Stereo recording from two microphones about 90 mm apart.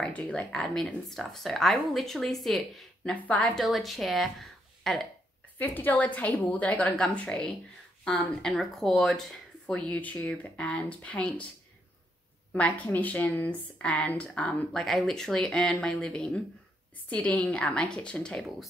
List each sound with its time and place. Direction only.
0.0 s speech: 10° left (ahead or behind)
3.5 s speech: centre (ahead or behind)
5.6 s speech: 20° left (ahead or behind)
12.5 s speech: 15° left (ahead or behind)